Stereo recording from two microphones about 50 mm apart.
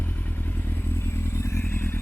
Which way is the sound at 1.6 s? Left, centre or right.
Left.